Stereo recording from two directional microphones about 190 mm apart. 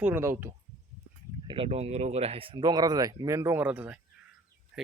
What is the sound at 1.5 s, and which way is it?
Speech, 30° right (ahead or behind).